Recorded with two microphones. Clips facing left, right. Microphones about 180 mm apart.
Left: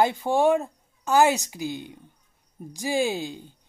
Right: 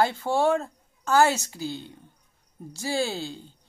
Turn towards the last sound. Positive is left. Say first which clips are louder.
# left 3 dB
turn(degrees=15)  # may be behind; listen again after turning